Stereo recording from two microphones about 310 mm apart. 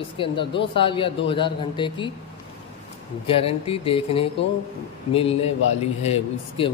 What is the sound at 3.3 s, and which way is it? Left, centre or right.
Speech, centre.